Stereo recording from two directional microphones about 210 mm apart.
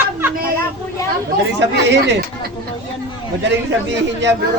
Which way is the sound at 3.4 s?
55° right (ahead or behind).